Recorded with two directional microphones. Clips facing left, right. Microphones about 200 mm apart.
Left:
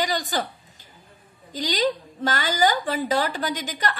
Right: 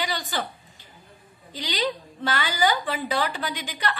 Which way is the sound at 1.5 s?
45° left (ahead or behind).